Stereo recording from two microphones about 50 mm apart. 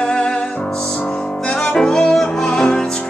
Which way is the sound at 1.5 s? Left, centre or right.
Centre.